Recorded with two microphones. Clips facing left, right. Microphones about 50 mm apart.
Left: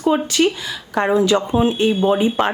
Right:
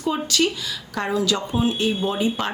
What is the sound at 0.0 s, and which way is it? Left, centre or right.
Speech, left.